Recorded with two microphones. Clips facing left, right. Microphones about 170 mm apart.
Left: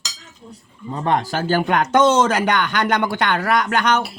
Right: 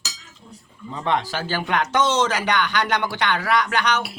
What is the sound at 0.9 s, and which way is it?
Speech, 45° left (ahead or behind).